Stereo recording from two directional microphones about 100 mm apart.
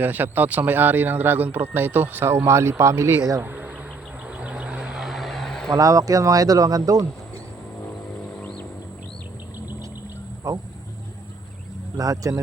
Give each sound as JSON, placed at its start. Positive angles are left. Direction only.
{"t": 0.0, "sound": "a man's voice", "side_deg": -20}
{"t": 3.4, "sound": "speech", "side_deg": -20}
{"t": 4.3, "sound": "a sound", "side_deg": -10}
{"t": 5.7, "sound": "speech", "side_deg": -35}
{"t": 8.4, "sound": "a sound", "side_deg": 10}
{"t": 10.5, "sound": "speech", "side_deg": -30}
{"t": 11.9, "sound": "speech", "side_deg": -35}